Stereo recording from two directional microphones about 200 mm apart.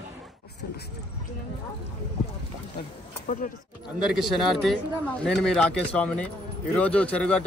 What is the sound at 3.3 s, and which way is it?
Speech, 40° left (ahead or behind).